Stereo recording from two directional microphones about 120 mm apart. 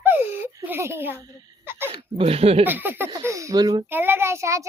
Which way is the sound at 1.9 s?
50° right (ahead or behind).